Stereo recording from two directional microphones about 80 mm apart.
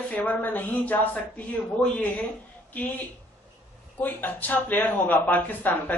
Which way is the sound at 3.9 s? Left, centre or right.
Left.